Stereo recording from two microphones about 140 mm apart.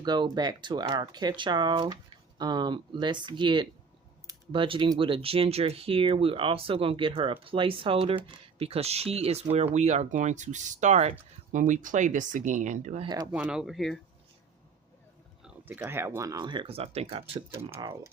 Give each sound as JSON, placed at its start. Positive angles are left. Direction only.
{"t": 0.0, "sound": "speech", "side_deg": -30}
{"t": 11.5, "sound": "speech", "side_deg": -70}
{"t": 13.3, "sound": "speech", "side_deg": -5}
{"t": 15.4, "sound": "speech", "side_deg": -15}
{"t": 17.5, "sound": "speech", "side_deg": -15}
{"t": 17.7, "sound": "speech", "side_deg": -30}